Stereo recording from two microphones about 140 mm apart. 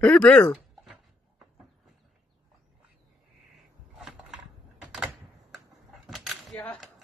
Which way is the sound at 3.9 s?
5° right (ahead or behind).